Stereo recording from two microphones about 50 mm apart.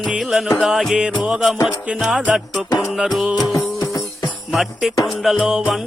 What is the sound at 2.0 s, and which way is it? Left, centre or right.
Music, centre.